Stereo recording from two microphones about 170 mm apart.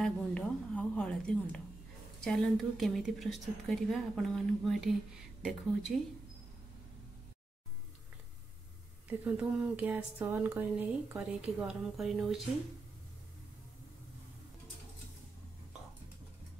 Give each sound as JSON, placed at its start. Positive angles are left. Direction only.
{"t": 0.0, "sound": "a sound", "side_deg": 5}
{"t": 2.2, "sound": "a woman's voice", "side_deg": 5}
{"t": 9.2, "sound": "speech", "side_deg": -10}